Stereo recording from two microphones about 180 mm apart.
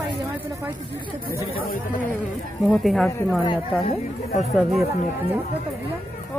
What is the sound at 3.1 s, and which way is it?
Speech, 15° left (ahead or behind).